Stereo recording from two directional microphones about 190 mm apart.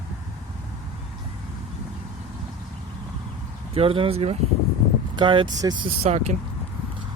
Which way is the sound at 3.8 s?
30° right (ahead or behind).